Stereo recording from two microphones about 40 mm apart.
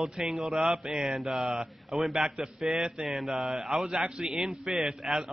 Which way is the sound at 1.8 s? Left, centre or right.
Centre.